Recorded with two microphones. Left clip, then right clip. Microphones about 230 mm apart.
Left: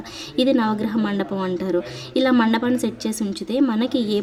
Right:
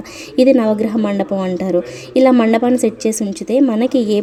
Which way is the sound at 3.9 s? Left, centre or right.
Right.